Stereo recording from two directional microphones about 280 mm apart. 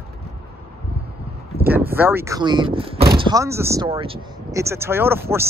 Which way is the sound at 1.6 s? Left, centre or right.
Centre.